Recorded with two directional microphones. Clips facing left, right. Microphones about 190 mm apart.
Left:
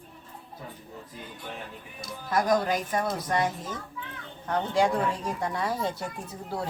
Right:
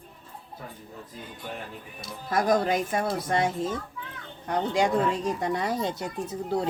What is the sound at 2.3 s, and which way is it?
Speech, 25° right (ahead or behind).